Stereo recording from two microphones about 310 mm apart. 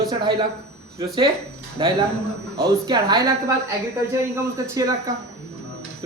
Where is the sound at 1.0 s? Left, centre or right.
Centre.